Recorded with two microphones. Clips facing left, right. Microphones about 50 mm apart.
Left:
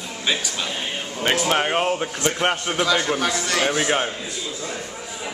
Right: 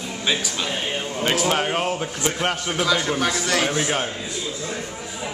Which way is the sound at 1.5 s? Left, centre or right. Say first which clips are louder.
Left 2 dB; centre.